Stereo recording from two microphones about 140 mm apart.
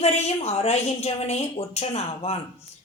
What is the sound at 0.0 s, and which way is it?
A woman's voice, 50° left (ahead or behind).